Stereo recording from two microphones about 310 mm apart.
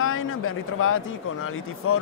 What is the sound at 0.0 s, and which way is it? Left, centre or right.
Speech, left.